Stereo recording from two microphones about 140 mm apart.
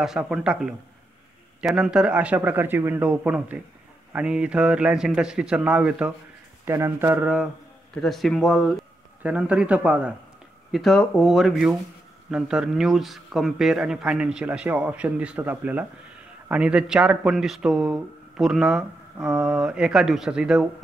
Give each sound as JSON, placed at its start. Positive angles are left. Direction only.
{"t": 0.0, "sound": "speech", "side_deg": -5}
{"t": 7.9, "sound": "speech", "side_deg": 0}